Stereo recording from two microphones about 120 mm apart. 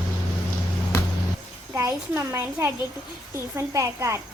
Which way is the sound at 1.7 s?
25° right (ahead or behind).